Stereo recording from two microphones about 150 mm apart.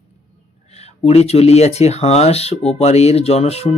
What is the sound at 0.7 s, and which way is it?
Speech, 45° left (ahead or behind).